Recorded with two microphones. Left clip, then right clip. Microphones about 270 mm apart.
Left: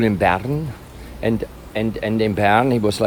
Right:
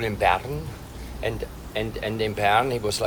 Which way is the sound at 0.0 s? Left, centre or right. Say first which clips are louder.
Left 4 dB; left.